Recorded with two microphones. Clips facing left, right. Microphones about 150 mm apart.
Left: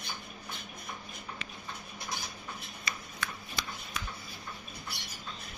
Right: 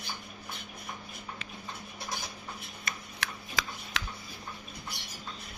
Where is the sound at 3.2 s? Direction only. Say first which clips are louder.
Right 4 dB; 90° right.